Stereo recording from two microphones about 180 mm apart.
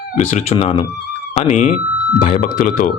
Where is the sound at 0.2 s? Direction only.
40° left (ahead or behind).